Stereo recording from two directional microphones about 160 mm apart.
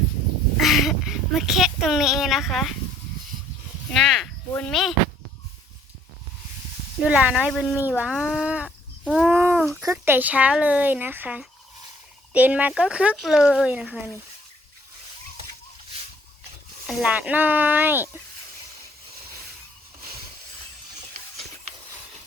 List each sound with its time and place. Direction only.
0.5 s a child's voice: centre (ahead or behind)
3.9 s speech: 5° left (ahead or behind)
7.1 s speech: 10° right (ahead or behind)
9.1 s a sound: 10° right (ahead or behind)
9.8 s speech: 15° right (ahead or behind)
16.8 s speech: 5° right (ahead or behind)